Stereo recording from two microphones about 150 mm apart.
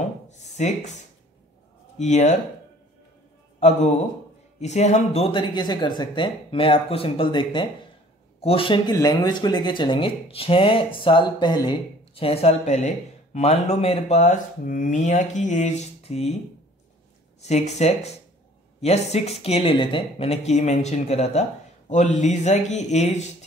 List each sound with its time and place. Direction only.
0.3 s a sound: 50° left (ahead or behind)
2.0 s speech: 50° left (ahead or behind)
3.5 s a man's voice: 50° left (ahead or behind)
17.4 s speech: 45° left (ahead or behind)